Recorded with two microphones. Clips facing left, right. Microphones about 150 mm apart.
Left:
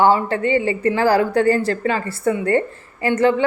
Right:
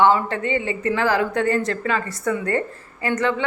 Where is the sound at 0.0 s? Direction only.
35° left (ahead or behind).